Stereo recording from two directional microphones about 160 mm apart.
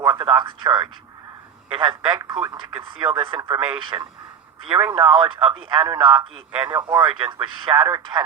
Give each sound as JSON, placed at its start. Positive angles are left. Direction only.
{"t": 0.0, "sound": "speech", "side_deg": -25}
{"t": 4.8, "sound": "speech", "side_deg": -15}
{"t": 5.5, "sound": "speech", "side_deg": -30}